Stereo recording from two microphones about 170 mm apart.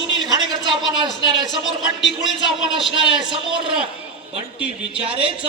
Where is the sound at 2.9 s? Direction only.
30° right (ahead or behind).